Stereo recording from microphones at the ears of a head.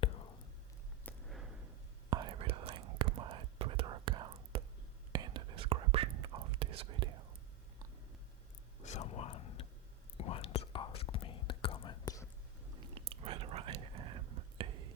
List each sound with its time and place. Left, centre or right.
0.0 s whispering: left
1.6 s whispering: right
8.9 s a sound: left
10.2 s whispering: left
12.7 s whispering: right